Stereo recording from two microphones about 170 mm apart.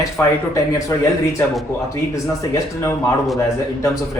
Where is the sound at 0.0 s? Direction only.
15° left (ahead or behind).